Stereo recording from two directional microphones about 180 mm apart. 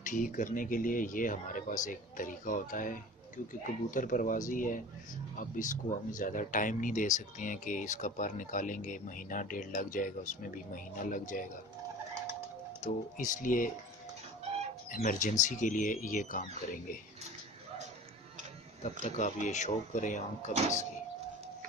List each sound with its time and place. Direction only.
0.0 s speech: 45° left (ahead or behind)
12.8 s speech: 45° left (ahead or behind)
14.9 s speech: 45° left (ahead or behind)
19.0 s speech: 45° left (ahead or behind)